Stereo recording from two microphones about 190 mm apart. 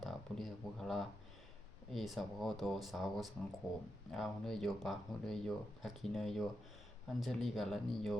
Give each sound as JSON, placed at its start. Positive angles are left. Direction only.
{"t": 0.0, "sound": "speech", "side_deg": 0}